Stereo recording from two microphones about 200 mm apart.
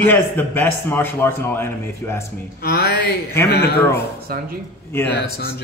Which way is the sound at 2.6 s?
50° left (ahead or behind).